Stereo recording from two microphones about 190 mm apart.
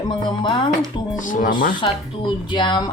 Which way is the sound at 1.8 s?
25° left (ahead or behind).